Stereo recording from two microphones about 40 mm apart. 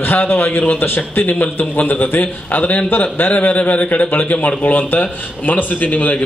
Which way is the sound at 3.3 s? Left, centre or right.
Left.